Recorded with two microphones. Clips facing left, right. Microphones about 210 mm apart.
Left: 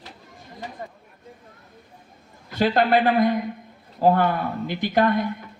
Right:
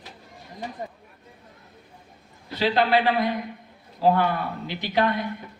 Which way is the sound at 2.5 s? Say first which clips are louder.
Left 2 dB; 50° left (ahead or behind).